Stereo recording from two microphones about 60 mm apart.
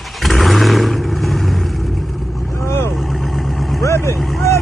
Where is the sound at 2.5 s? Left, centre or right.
Left.